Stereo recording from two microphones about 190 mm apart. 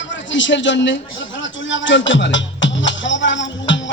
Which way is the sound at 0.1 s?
75° left (ahead or behind).